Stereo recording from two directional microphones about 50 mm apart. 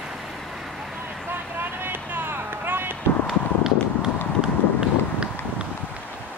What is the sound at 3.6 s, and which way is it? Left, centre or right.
Run, centre.